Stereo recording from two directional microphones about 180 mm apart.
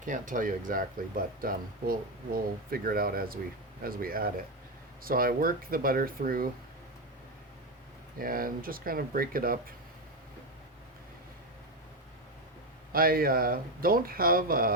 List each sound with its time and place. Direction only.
0.0 s speech: 45° right (ahead or behind)
8.2 s speech: 50° right (ahead or behind)
12.9 s speech: 55° right (ahead or behind)